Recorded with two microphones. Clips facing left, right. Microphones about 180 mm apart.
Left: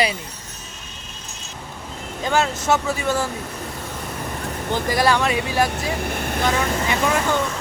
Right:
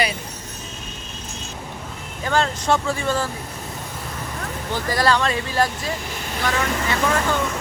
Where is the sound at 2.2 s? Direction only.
10° left (ahead or behind).